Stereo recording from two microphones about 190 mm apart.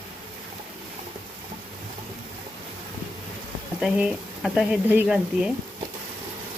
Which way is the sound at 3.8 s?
5° right (ahead or behind).